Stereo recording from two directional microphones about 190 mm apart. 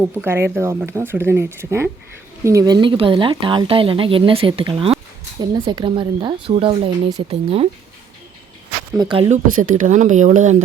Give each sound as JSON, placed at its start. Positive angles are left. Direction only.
{"t": 0.1, "sound": "speech", "side_deg": -10}
{"t": 9.0, "sound": "speech", "side_deg": -25}
{"t": 9.3, "sound": "speech", "side_deg": -40}